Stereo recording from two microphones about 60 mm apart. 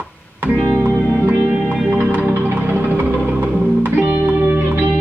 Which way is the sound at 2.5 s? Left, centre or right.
Right.